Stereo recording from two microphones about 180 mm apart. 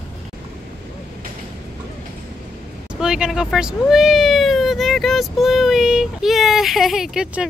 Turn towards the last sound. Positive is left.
turn(degrees=-5)  # may be behind; listen again after turning